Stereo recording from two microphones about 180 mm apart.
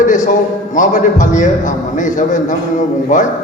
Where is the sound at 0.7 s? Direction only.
45° left (ahead or behind).